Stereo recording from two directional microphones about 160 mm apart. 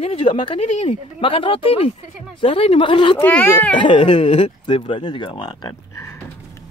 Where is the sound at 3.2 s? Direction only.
10° left (ahead or behind).